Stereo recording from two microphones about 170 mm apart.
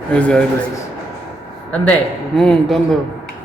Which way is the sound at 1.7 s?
10° left (ahead or behind).